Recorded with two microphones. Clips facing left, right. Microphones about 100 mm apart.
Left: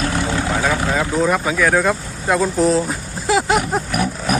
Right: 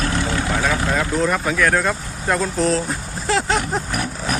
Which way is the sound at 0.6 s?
5° left (ahead or behind).